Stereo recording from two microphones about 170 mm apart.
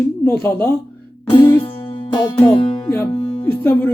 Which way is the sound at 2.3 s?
35° left (ahead or behind).